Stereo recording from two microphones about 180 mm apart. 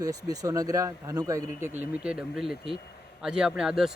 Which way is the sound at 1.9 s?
5° right (ahead or behind).